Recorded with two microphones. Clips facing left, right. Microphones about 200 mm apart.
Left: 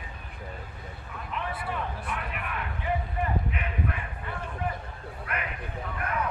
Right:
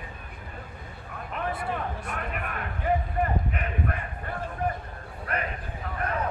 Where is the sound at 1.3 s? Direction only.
45° right (ahead or behind).